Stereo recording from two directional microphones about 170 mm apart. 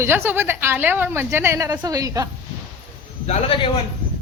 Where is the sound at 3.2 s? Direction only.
35° left (ahead or behind).